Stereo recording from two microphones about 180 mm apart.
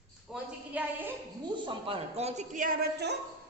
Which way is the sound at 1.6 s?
30° right (ahead or behind).